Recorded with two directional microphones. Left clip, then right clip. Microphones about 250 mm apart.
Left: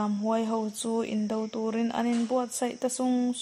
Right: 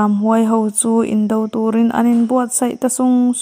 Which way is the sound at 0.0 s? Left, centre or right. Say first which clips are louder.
Right 13 dB; right.